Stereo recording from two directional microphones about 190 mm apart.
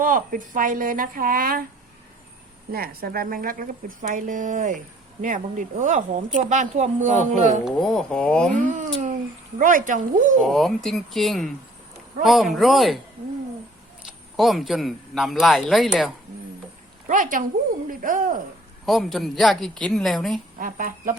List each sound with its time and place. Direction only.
0.0 s speech: 45° right (ahead or behind)
2.7 s a woman's voice: 50° right (ahead or behind)
7.6 s a man's voice: centre (ahead or behind)
8.5 s a woman's voice: 40° right (ahead or behind)
10.4 s a man's voice: centre (ahead or behind)
14.3 s a man's voice: centre (ahead or behind)
17.1 s speech: 45° right (ahead or behind)
18.9 s a man's voice: centre (ahead or behind)
20.6 s speech: 45° right (ahead or behind)